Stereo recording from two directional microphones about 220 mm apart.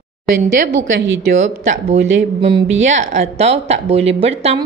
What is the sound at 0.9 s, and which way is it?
Speech, 60° right (ahead or behind).